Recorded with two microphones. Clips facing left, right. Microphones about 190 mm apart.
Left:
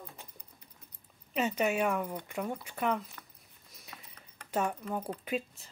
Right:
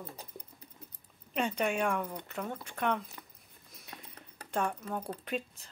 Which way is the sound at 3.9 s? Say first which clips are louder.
Right 2 dB; centre (ahead or behind).